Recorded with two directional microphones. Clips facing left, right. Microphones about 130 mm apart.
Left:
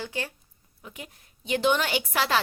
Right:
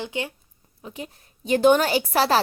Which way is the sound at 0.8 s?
30° right (ahead or behind).